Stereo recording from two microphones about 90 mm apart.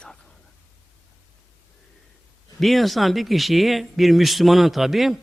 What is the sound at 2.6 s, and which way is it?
A man's voice, centre (ahead or behind).